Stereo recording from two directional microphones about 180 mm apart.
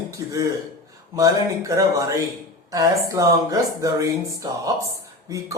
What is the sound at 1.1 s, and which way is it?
A woman's voice, 20° right (ahead or behind).